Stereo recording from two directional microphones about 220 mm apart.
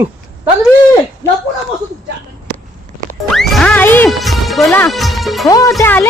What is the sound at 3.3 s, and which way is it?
Music, centre (ahead or behind).